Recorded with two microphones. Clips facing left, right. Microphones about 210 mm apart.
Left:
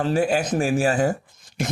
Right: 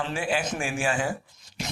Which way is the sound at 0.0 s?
40° left (ahead or behind).